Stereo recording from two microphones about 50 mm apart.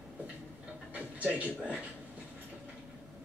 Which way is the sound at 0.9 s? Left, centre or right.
Right.